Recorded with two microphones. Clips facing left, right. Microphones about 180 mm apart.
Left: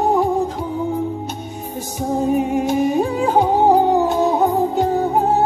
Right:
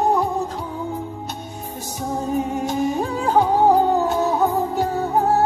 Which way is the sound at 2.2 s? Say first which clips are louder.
Left 5 dB; 15° left (ahead or behind).